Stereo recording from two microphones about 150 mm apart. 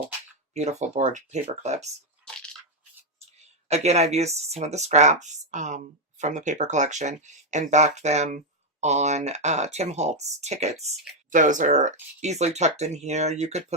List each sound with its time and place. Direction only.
0.5 s speech: 50° right (ahead or behind)
2.2 s squish: 5° left (ahead or behind)
3.4 s speech: 45° right (ahead or behind)
11.3 s speech: 60° right (ahead or behind)